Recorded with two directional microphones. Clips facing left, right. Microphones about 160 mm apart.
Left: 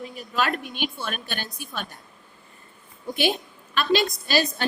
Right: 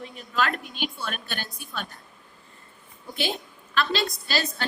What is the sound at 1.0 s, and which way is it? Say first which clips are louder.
Speech: left 2 dB; 20° left (ahead or behind).